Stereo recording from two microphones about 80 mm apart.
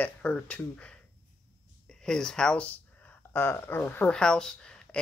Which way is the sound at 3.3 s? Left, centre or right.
Left.